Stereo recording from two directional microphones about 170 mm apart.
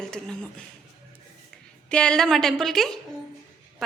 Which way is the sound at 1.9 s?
5° left (ahead or behind).